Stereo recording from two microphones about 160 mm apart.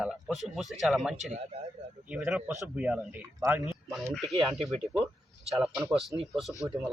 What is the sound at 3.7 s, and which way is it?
Speech, centre (ahead or behind).